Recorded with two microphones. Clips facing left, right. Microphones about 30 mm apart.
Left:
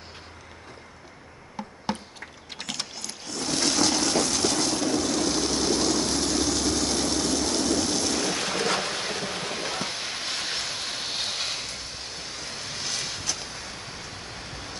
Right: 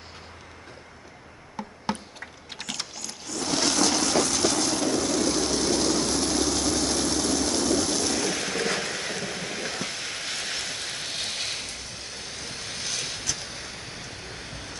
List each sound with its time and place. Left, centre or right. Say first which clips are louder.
1.6 s tick-tock: even; centre
2.5 s sewing machine: left 1 dB; centre
3.3 s a sound: right 1 dB; centre
8.7 s rain: left 1 dB; left
9.6 s rain: left 1 dB; left
9.8 s a sound: left 1 dB; centre
11.6 s vehicle: left 1 dB; centre